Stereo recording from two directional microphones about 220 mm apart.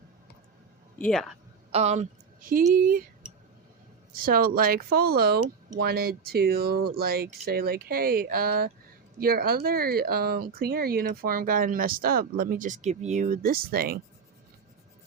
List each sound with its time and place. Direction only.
0.9 s speech: 5° left (ahead or behind)
1.7 s a woman's voice: 30° right (ahead or behind)
4.1 s speech: 40° right (ahead or behind)